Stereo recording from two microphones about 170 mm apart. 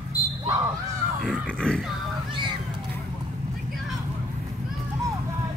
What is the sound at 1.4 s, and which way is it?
Music, 5° left (ahead or behind).